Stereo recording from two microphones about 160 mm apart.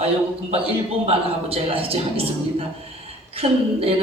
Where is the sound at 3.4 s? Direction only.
40° right (ahead or behind).